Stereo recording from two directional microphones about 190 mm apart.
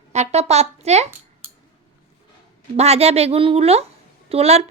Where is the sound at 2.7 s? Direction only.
35° right (ahead or behind).